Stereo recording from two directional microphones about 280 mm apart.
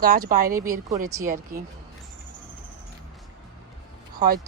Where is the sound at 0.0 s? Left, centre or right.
Right.